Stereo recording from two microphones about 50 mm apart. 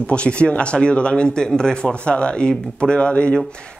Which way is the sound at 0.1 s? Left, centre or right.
Left.